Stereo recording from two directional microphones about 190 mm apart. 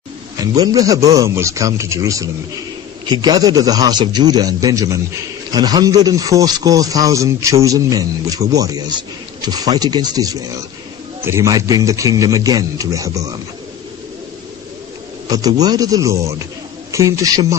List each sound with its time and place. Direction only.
0.4 s a man's voice: 20° right (ahead or behind)
15.2 s a man's voice: 20° right (ahead or behind)